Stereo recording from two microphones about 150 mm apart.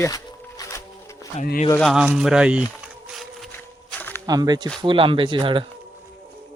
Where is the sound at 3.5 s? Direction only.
15° left (ahead or behind).